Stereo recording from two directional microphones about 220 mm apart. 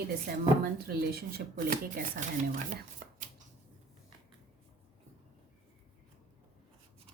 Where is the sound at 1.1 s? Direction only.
40° right (ahead or behind).